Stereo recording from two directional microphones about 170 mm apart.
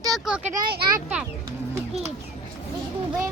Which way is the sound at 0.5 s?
55° right (ahead or behind).